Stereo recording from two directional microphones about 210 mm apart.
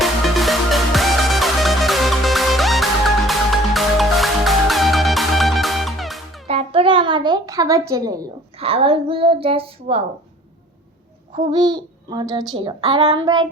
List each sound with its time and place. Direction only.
0.0 s music: centre (ahead or behind)
6.5 s a sound: 25° right (ahead or behind)
8.5 s speech: 25° right (ahead or behind)
11.3 s speech: 20° right (ahead or behind)